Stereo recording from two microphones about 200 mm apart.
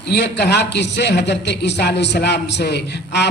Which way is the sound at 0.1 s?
55° left (ahead or behind).